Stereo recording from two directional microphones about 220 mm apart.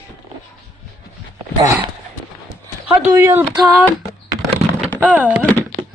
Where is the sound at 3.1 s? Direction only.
15° right (ahead or behind).